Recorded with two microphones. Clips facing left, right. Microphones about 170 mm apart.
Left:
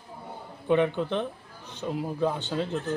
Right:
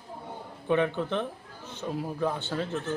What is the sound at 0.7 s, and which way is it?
Speech, 15° left (ahead or behind).